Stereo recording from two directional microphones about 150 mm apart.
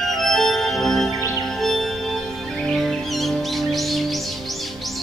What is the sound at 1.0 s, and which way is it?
Music, 20° right (ahead or behind).